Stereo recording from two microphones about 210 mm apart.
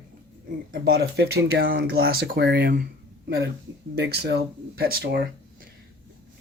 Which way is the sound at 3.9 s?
55° right (ahead or behind).